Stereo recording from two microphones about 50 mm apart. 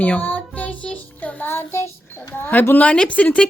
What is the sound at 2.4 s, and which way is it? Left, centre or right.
Speech, left.